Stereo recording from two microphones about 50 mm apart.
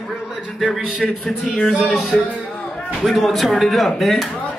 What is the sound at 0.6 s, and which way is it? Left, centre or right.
Speech, centre.